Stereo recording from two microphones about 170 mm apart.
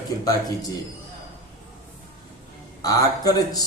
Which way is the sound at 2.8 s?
20° left (ahead or behind).